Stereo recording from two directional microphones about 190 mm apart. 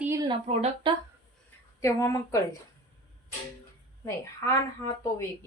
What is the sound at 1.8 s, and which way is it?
Speech, 15° left (ahead or behind).